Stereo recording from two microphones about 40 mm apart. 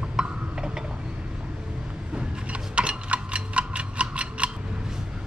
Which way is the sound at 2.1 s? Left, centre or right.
Right.